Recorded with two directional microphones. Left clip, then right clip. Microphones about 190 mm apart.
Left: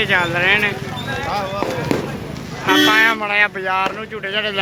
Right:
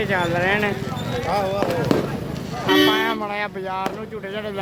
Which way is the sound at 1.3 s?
70° right (ahead or behind).